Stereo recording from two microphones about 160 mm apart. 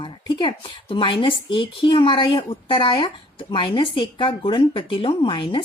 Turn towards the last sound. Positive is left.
turn(degrees=30)  # may be behind; listen again after turning